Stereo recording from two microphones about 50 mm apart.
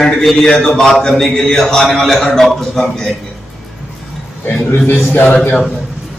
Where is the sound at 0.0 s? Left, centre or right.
Centre.